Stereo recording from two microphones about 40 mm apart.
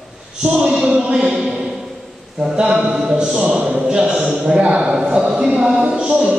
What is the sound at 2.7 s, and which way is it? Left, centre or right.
Speech, centre.